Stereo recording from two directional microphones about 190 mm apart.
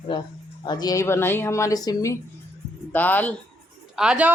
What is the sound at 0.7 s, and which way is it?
Speech, 20° left (ahead or behind).